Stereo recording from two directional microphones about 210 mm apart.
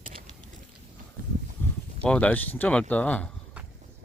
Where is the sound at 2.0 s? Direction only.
5° left (ahead or behind).